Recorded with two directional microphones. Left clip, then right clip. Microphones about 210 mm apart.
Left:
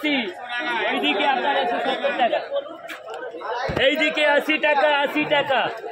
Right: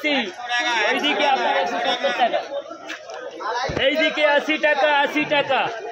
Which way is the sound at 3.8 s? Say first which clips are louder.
Even; 40° left (ahead or behind).